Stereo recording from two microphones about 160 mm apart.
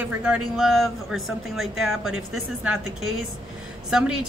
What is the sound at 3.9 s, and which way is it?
Speech, 5° right (ahead or behind).